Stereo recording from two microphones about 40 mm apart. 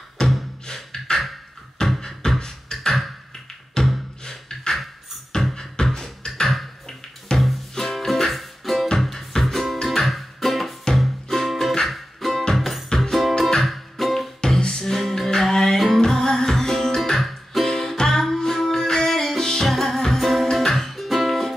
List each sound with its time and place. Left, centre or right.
0.2 s music: centre
0.7 s beatboxing: centre
3.8 s music: centre
4.2 s beatboxing: centre
5.5 s music: centre
5.9 s beatboxing: centre
6.5 s beatboxing: centre
7.3 s music: centre
7.7 s music: centre
13.3 s music: centre
14.4 s music: centre